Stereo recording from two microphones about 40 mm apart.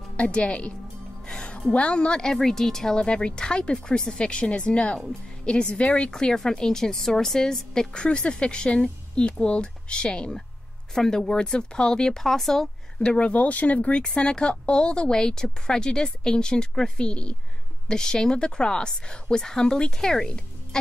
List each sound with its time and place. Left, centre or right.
0.2 s speech: left
1.2 s music: centre
1.7 s speech: left
2.3 s a woman's voice: centre
3.0 s speech: left
6.1 s a woman's voice: centre
12.2 s a woman's voice: centre
13.2 s a woman's voice: left; by 20.2 s centre
20.2 s music: left